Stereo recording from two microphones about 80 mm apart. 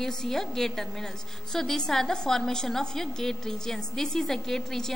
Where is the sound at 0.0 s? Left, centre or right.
Centre.